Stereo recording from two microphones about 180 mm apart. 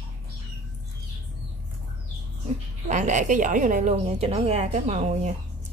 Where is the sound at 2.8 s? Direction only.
40° right (ahead or behind).